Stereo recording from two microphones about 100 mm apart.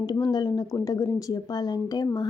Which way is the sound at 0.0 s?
45° left (ahead or behind).